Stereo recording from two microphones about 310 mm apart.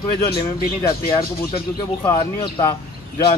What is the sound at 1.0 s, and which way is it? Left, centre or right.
Speech, centre.